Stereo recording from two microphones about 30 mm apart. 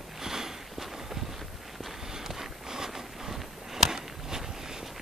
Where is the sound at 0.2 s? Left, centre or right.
Centre.